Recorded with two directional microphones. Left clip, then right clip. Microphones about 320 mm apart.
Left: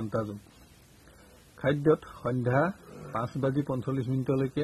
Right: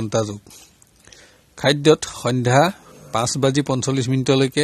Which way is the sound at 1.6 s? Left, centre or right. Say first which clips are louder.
Right 10 dB; right.